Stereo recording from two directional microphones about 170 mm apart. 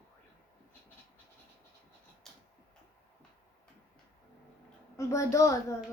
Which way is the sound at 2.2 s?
Centre (ahead or behind).